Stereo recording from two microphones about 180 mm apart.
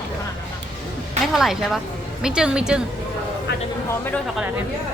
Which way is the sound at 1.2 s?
Centre (ahead or behind).